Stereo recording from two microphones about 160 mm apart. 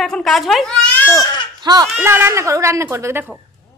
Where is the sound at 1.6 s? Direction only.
25° right (ahead or behind).